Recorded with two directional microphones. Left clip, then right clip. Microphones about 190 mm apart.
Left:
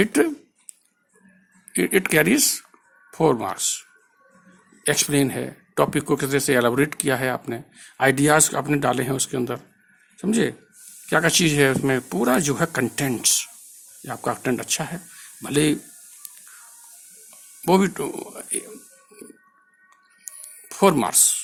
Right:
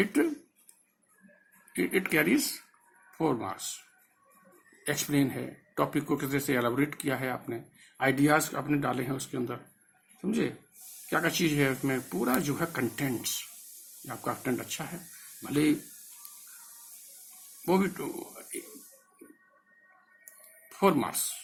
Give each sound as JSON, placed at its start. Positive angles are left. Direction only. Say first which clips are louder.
{"t": 0.0, "sound": "speech", "louder": "left 8 dB", "side_deg": 55}
{"t": 1.7, "sound": "speech", "louder": "left 8 dB", "side_deg": 55}
{"t": 4.8, "sound": "speech", "louder": "left 9 dB", "side_deg": 50}
{"t": 17.7, "sound": "speech", "louder": "left 9 dB", "side_deg": 55}
{"t": 20.7, "sound": "speech", "louder": "left 8 dB", "side_deg": 55}